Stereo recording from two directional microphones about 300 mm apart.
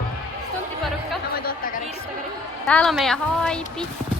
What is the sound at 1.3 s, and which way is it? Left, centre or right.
Music, left.